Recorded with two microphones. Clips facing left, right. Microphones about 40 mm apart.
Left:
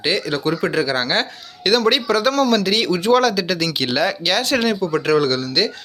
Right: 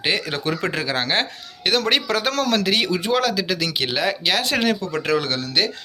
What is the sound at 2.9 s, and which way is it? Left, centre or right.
Speech, centre.